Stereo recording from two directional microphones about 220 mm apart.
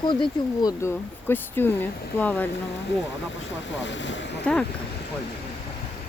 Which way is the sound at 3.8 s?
55° left (ahead or behind).